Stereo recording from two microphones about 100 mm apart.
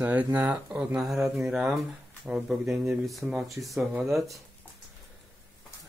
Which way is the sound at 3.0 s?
Centre (ahead or behind).